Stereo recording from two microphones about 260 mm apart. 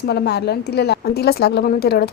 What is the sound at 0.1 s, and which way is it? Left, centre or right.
A woman's voice, left.